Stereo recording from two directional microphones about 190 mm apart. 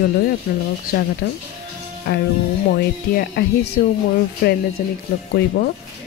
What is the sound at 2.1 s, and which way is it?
Speech, 60° left (ahead or behind).